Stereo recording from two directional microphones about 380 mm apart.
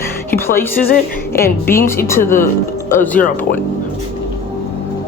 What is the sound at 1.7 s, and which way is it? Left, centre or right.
Speech, centre.